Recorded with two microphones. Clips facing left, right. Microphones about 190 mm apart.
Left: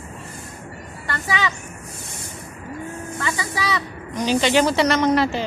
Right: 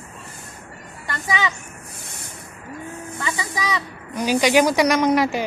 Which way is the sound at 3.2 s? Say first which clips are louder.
Left 1 dB; 15° right (ahead or behind).